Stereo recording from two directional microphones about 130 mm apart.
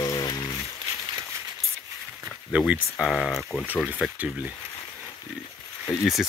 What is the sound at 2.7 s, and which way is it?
Speech, centre (ahead or behind).